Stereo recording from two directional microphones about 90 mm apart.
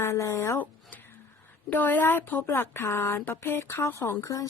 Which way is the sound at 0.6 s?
20° left (ahead or behind).